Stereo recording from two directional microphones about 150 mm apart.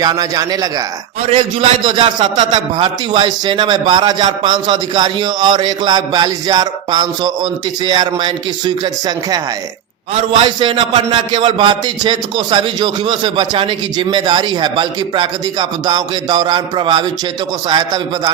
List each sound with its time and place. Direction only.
0.0 s a man's voice: 25° right (ahead or behind)